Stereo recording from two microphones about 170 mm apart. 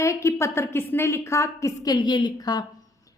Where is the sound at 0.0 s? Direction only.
15° left (ahead or behind).